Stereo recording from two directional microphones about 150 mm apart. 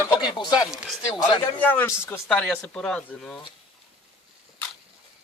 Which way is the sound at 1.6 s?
10° left (ahead or behind).